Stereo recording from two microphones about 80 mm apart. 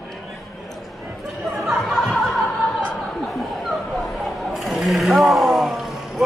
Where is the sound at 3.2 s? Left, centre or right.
Centre.